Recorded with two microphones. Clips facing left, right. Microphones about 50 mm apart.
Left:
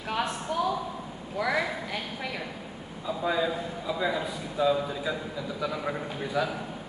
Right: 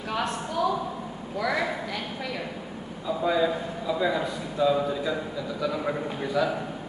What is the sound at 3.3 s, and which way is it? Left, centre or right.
A man's voice, centre.